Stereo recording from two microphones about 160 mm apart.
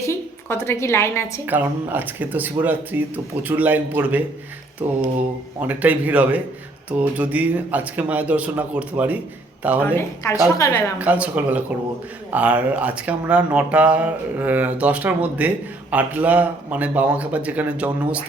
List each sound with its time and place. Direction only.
0.1 s a woman's voice: 15° left (ahead or behind)
1.5 s speech: 10° right (ahead or behind)
9.8 s speech: 15° left (ahead or behind)
10.9 s speech: 10° right (ahead or behind)